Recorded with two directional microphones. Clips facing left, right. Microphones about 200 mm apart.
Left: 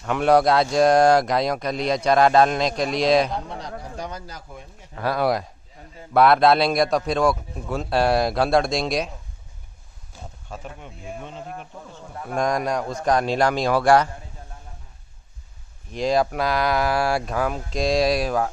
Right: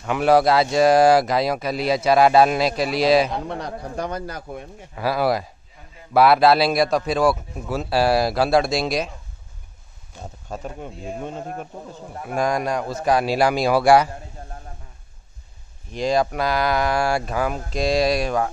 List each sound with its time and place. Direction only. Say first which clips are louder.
0.0 s speech: right 1 dB; 5° right (ahead or behind)
3.3 s speech: right 3 dB; 60° right (ahead or behind)
4.9 s speech: right 1 dB; 5° right (ahead or behind)
10.5 s a man's voice: right 6 dB; 40° right (ahead or behind)
12.2 s a man's voice: right 1 dB; 5° right (ahead or behind)
15.9 s speech: even; centre (ahead or behind)